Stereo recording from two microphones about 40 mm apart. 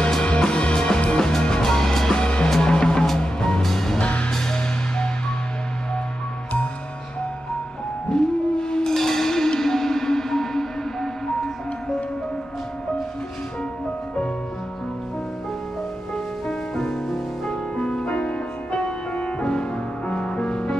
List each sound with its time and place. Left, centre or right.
0.3 s music: left
3.6 s music: centre
4.0 s music: left
4.3 s music: centre
8.1 s howl: centre
8.9 s music: centre
16.4 s music: centre